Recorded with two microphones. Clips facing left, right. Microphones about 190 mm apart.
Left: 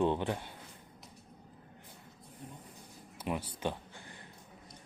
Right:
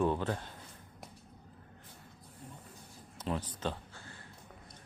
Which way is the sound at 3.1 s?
10° left (ahead or behind).